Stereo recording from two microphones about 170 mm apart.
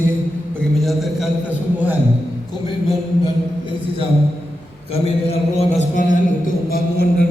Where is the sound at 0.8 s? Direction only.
Centre (ahead or behind).